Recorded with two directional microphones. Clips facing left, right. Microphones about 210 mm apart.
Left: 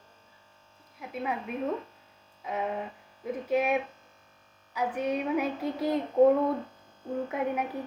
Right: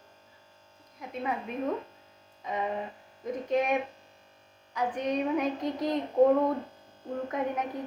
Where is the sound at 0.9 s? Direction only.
5° left (ahead or behind).